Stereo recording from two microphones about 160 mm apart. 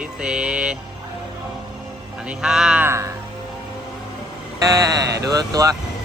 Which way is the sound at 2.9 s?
20° right (ahead or behind).